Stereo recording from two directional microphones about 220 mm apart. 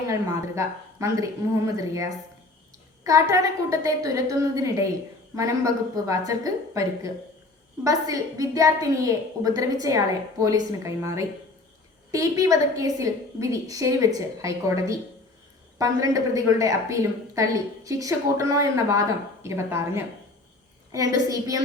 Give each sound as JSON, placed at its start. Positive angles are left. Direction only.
{"t": 0.1, "sound": "a woman's voice", "side_deg": -15}